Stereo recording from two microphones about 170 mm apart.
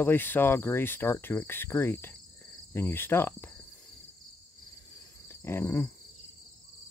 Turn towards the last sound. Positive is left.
turn(degrees=15)  # may be behind; listen again after turning